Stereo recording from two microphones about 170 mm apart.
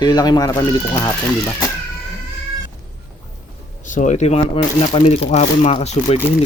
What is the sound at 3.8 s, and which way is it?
A child's voice, 45° left (ahead or behind).